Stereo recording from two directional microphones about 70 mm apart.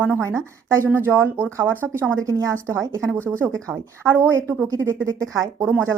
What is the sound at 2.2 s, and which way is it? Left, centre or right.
Speech, right.